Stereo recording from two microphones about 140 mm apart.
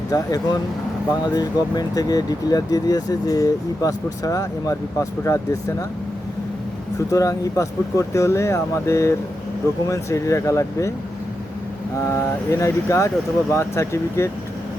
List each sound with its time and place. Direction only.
0.1 s speech: 25° left (ahead or behind)
7.1 s speech: 25° left (ahead or behind)
12.0 s speech: 20° left (ahead or behind)